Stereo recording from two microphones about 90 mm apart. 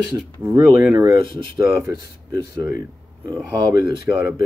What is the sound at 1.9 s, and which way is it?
Speech, 50° right (ahead or behind).